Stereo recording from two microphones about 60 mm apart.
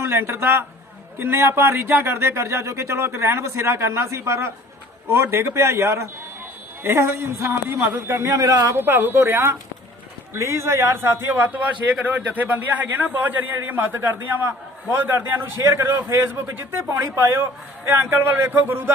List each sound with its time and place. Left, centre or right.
0.0 s speech: right
7.8 s speech: right
8.7 s a man's voice: right